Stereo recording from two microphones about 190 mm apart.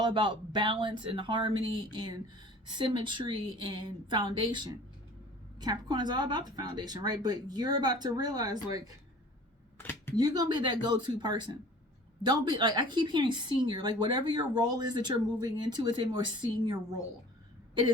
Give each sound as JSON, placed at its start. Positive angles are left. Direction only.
{"t": 0.0, "sound": "a woman's voice", "side_deg": -25}
{"t": 9.7, "sound": "speech", "side_deg": 10}
{"t": 10.2, "sound": "a woman's voice", "side_deg": -20}